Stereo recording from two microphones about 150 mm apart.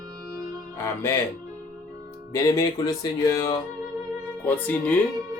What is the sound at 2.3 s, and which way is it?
Speech, 20° left (ahead or behind).